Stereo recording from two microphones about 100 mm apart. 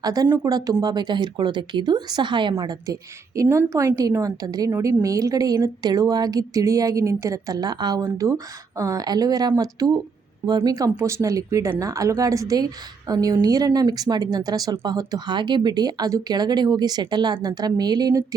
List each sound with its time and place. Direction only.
0.0 s speech: 40° right (ahead or behind)
2.8 s speech: 35° right (ahead or behind)